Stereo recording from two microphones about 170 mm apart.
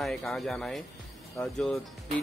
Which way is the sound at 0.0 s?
Centre (ahead or behind).